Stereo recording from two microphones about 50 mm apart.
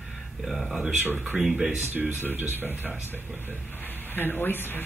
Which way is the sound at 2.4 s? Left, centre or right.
Right.